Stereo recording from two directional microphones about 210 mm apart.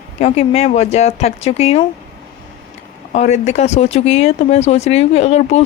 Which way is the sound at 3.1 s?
30° left (ahead or behind).